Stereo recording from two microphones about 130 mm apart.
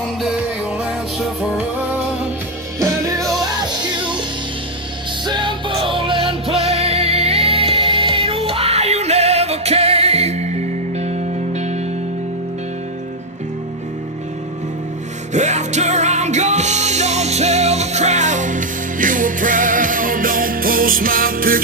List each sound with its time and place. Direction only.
0.2 s music: 5° right (ahead or behind)
2.7 s music: 25° right (ahead or behind)
5.2 s music: 35° right (ahead or behind); by 11.2 s 55° right (ahead or behind)
15.3 s music: 65° right (ahead or behind); by 21.6 s 90° right